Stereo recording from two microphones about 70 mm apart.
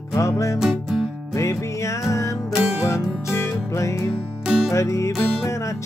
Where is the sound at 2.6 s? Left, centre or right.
Centre.